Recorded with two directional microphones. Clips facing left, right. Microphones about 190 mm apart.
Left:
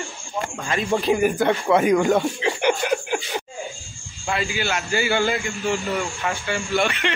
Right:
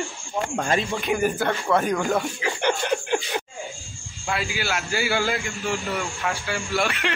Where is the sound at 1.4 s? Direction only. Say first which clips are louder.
Left 4 dB; 20° left (ahead or behind).